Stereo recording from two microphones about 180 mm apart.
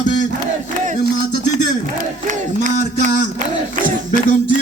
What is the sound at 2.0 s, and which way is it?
Speech, 45° right (ahead or behind).